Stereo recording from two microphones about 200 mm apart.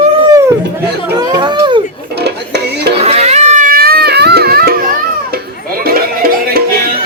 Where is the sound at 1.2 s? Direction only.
20° right (ahead or behind).